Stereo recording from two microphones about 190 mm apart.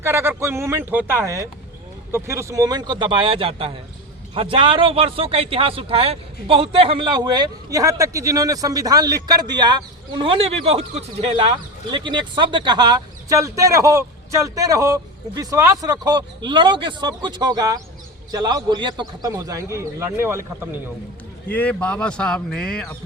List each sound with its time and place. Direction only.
0.0 s a man's voice: 15° right (ahead or behind)
21.5 s speech: 5° left (ahead or behind)